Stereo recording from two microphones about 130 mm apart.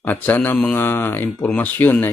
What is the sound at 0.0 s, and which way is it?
Speech, 15° left (ahead or behind).